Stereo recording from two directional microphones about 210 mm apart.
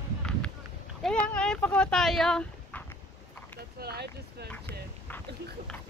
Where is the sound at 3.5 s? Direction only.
50° right (ahead or behind).